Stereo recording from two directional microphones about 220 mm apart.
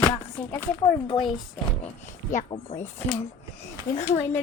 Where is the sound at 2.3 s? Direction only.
30° left (ahead or behind).